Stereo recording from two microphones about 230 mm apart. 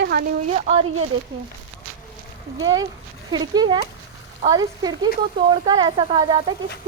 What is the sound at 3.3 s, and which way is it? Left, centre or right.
Speech, centre.